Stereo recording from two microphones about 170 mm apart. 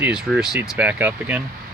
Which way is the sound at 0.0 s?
5° right (ahead or behind).